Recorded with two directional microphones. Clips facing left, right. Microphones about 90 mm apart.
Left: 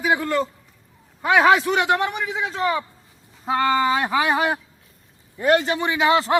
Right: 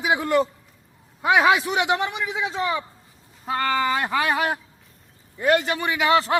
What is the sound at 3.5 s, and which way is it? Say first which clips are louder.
A man's voice: left 3 dB; 20° left (ahead or behind).